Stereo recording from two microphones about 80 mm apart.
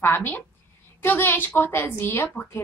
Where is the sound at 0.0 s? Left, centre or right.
Left.